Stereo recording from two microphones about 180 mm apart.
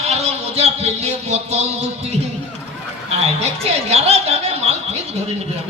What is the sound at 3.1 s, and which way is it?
A woman's voice, 35° right (ahead or behind).